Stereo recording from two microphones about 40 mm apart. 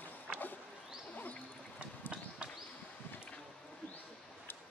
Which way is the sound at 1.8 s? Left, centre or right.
Right.